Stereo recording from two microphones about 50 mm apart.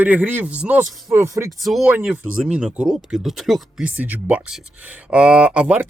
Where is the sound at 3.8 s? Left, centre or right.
Right.